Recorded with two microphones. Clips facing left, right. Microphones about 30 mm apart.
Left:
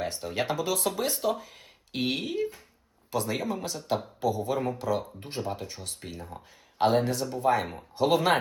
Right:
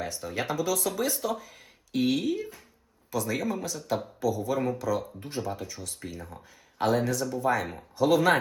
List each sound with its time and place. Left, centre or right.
0.0 s speech: left